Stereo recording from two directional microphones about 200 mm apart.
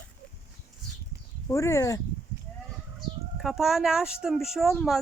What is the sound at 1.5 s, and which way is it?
Speech, 15° left (ahead or behind).